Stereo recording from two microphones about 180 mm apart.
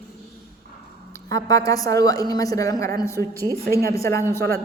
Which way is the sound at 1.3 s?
20° left (ahead or behind).